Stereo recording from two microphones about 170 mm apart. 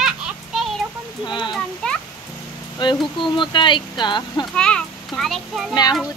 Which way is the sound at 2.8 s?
25° left (ahead or behind).